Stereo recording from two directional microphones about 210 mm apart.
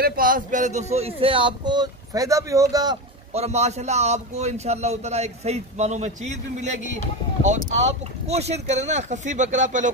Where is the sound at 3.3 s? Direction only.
30° right (ahead or behind).